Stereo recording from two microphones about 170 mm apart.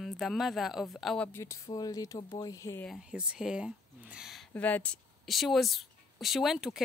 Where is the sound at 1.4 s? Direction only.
20° left (ahead or behind).